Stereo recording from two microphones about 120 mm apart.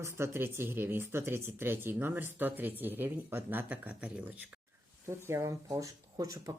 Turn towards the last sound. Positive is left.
turn(degrees=-30)  # may be behind; listen again after turning